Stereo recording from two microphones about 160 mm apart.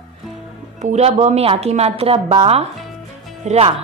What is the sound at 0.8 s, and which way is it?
A woman's voice, 45° right (ahead or behind).